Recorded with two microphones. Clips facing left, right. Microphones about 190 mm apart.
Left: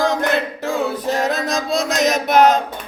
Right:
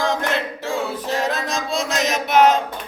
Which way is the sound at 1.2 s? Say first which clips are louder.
Left 2 dB; 40° left (ahead or behind).